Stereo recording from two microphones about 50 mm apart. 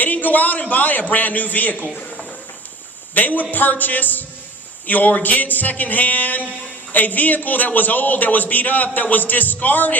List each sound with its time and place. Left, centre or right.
0.0 s a man's voice: left
3.2 s a man's voice: left